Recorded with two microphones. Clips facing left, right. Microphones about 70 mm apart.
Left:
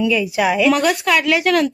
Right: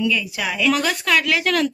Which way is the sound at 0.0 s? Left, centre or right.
Centre.